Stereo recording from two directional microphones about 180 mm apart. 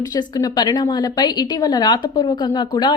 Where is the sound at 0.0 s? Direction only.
20° left (ahead or behind).